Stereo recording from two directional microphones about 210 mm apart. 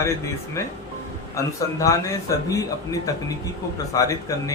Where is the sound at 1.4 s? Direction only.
15° left (ahead or behind).